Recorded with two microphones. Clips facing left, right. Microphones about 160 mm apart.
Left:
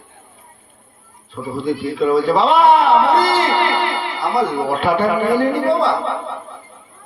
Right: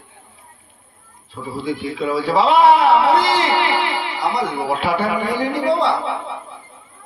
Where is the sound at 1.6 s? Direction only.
45° left (ahead or behind).